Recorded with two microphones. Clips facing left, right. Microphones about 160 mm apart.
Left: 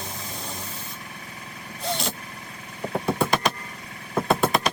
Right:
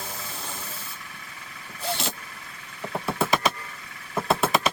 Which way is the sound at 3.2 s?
5° right (ahead or behind).